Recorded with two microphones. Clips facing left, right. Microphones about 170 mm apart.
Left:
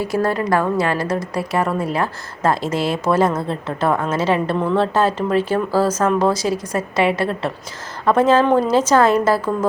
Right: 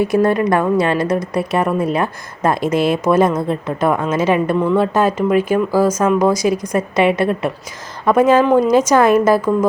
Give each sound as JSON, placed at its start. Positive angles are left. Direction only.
{"t": 0.0, "sound": "a woman's voice", "side_deg": -20}